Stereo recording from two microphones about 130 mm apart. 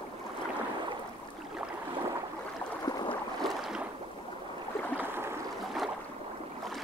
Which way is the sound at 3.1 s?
Centre (ahead or behind).